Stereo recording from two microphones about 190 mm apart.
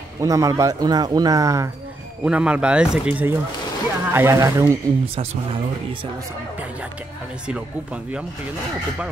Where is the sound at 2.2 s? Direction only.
5° right (ahead or behind).